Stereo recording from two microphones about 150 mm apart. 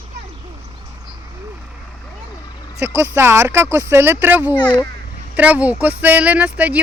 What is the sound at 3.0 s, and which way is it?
Speech, 15° right (ahead or behind).